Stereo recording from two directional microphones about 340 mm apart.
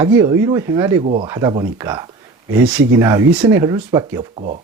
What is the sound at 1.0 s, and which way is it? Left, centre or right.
Speech, centre.